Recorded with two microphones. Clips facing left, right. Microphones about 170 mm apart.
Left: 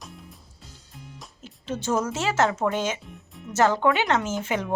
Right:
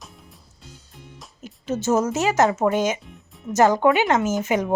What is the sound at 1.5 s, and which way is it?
Speech, 10° right (ahead or behind).